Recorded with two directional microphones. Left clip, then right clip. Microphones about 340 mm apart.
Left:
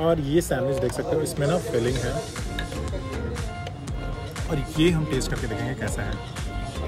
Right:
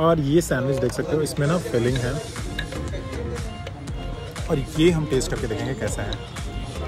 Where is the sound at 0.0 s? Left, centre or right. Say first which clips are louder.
Right 3 dB; centre.